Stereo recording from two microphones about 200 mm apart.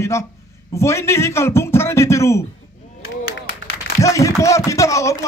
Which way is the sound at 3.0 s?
90° left.